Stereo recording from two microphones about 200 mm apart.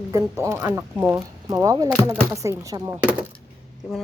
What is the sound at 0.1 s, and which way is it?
Speech, 15° right (ahead or behind).